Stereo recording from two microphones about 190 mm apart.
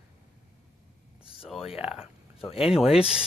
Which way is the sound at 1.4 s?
Centre (ahead or behind).